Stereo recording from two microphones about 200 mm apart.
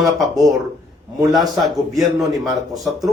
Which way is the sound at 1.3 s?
Centre (ahead or behind).